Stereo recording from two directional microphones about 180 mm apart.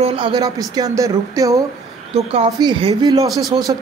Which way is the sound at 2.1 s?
35° right (ahead or behind).